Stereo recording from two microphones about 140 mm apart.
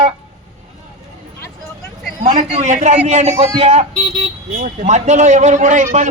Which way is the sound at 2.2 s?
55° right (ahead or behind).